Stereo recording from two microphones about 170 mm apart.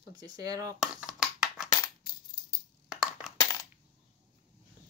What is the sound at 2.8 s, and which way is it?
Crushing, 5° right (ahead or behind).